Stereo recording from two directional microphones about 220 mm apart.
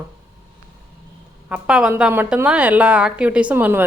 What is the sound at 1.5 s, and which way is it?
A woman's voice, 5° right (ahead or behind).